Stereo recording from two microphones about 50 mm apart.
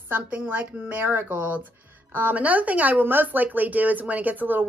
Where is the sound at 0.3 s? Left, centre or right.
Right.